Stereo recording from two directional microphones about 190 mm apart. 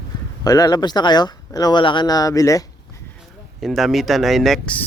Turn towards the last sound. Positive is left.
turn(degrees=5)  # may be behind; listen again after turning